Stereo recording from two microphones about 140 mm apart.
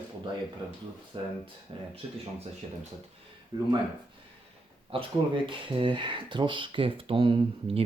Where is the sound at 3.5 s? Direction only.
30° right (ahead or behind).